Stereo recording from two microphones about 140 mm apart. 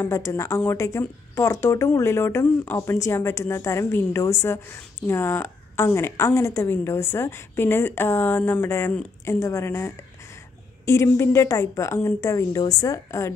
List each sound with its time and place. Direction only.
0.0 s a woman's voice: 20° left (ahead or behind)